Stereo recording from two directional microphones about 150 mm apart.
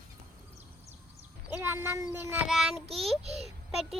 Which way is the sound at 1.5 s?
15° right (ahead or behind).